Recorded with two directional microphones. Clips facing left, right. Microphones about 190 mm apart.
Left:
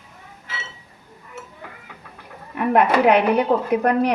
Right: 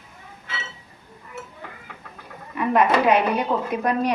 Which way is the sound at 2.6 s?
60° left (ahead or behind).